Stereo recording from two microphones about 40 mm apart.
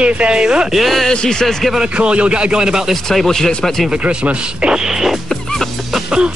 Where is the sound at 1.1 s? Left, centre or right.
Centre.